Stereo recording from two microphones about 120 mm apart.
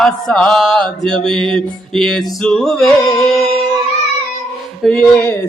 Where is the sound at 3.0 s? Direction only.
30° left (ahead or behind).